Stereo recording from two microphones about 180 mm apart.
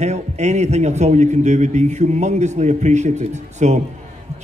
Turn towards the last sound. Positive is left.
turn(degrees=-40)  # may be behind; listen again after turning